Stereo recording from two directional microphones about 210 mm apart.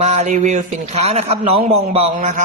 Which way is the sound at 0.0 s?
35° right (ahead or behind).